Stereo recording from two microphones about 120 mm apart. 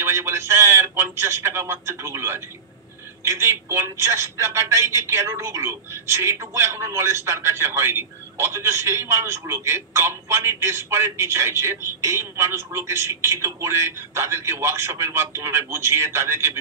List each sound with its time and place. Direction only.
0.0 s speech: 20° right (ahead or behind)